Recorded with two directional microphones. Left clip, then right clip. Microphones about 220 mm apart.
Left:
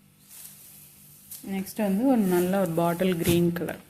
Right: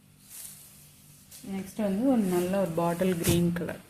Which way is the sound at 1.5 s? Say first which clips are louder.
Left 3 dB; 45° left (ahead or behind).